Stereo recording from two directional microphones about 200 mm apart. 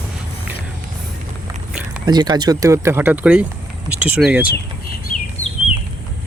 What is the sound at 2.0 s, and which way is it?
Speech, 20° right (ahead or behind).